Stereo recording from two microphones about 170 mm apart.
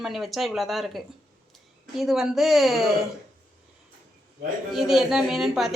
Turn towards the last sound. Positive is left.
turn(degrees=0)  # may be behind; listen again after turning